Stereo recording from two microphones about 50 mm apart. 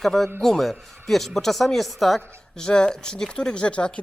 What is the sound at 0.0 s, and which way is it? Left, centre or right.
Speech, centre.